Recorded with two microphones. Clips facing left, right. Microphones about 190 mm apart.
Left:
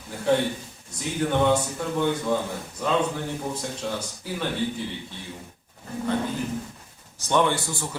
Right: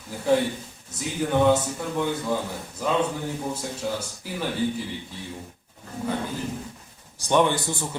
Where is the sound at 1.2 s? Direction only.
5° right (ahead or behind).